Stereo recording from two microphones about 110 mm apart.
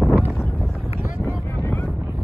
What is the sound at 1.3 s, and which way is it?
Vehicle, 25° left (ahead or behind).